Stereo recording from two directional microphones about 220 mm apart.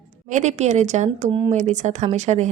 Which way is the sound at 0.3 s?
30° right (ahead or behind).